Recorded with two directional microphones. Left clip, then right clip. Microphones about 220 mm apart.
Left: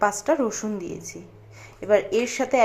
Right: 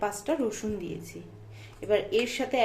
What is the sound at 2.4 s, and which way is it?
Speech, 5° left (ahead or behind).